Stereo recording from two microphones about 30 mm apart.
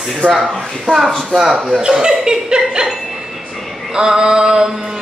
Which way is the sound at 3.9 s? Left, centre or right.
Right.